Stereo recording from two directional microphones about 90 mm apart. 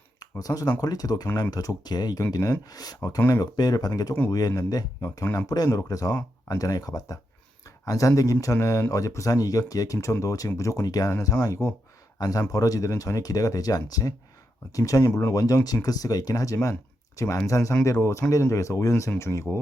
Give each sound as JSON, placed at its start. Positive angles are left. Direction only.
{"t": 0.2, "sound": "speech", "side_deg": 40}